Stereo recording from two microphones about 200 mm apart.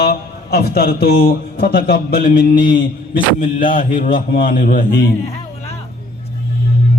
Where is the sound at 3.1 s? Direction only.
45° left (ahead or behind).